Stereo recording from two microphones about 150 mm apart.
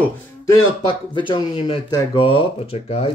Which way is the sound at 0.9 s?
35° left (ahead or behind).